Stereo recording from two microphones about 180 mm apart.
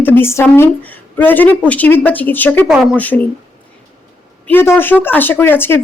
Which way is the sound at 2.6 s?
5° right (ahead or behind).